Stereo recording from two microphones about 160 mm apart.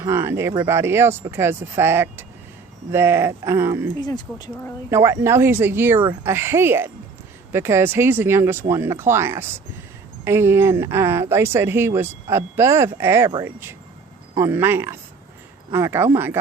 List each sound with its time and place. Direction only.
0.0 s speech: 15° right (ahead or behind)
4.0 s speech: 25° left (ahead or behind)
4.9 s speech: 15° right (ahead or behind)